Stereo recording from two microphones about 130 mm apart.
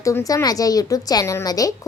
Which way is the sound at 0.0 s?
25° left (ahead or behind).